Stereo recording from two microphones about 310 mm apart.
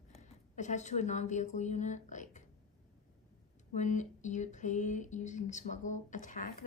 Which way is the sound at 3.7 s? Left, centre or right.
Left.